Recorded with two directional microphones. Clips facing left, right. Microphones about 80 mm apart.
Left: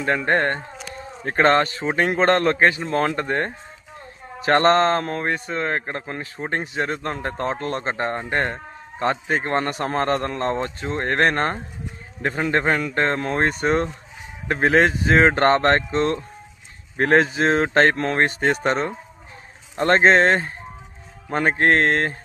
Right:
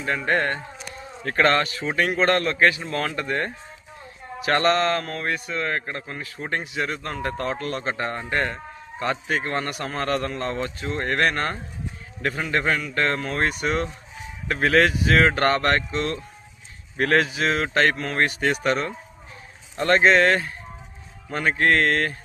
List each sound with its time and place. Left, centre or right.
0.3 s a man's voice: left
1.2 s a man's voice: left